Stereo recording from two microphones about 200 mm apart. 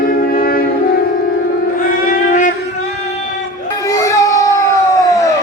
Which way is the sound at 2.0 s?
40° left (ahead or behind).